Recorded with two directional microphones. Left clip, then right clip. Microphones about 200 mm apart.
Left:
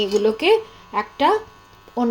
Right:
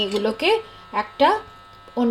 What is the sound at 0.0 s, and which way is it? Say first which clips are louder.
Speech: left 3 dB; centre (ahead or behind).